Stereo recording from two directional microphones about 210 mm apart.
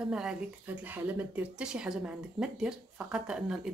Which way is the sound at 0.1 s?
5° right (ahead or behind).